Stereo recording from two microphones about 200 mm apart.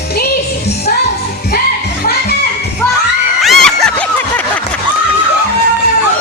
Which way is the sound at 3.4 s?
Centre (ahead or behind).